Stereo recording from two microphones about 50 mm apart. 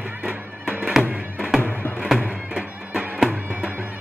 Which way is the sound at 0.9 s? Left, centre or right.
Centre.